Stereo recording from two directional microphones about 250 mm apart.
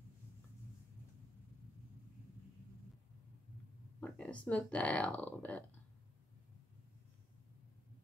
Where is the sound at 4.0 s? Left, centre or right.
Centre.